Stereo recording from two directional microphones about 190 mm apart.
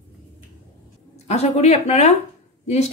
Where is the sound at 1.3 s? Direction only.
35° left (ahead or behind).